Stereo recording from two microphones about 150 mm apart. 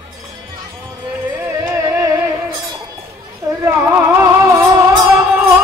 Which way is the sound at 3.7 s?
15° right (ahead or behind).